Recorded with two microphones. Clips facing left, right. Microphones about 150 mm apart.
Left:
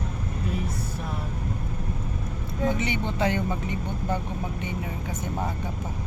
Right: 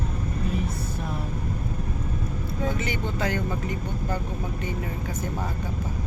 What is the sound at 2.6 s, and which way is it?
Speech, 20° left (ahead or behind).